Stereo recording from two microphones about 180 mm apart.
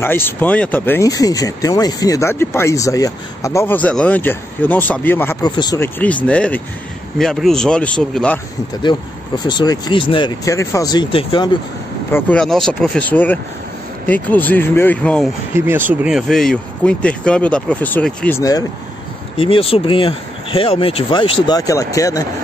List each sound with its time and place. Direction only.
0.0 s speech: 10° left (ahead or behind)
6.2 s speech: 5° left (ahead or behind)
8.9 s speech: 15° left (ahead or behind)
12.1 s speech: 5° left (ahead or behind)
15.5 s speech: 10° right (ahead or behind); by 18.4 s 10° left (ahead or behind)
18.4 s speech: 20° left (ahead or behind)
19.3 s speech: 30° left (ahead or behind)